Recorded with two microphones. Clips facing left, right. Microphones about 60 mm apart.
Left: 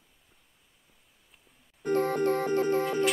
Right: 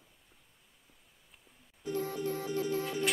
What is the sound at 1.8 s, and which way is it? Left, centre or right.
Music, left.